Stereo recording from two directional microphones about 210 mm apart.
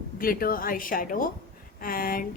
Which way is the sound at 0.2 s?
45° left (ahead or behind).